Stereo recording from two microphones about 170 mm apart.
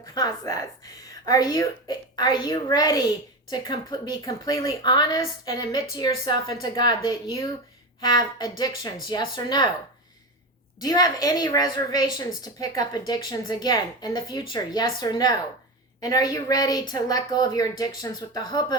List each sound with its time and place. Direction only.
0.0 s a woman's voice: 20° left (ahead or behind)
10.8 s a woman's voice: 20° left (ahead or behind)